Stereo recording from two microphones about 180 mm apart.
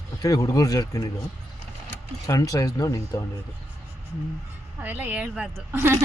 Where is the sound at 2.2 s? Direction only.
20° left (ahead or behind).